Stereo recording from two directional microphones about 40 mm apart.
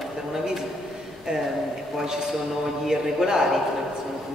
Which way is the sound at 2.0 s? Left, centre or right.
Centre.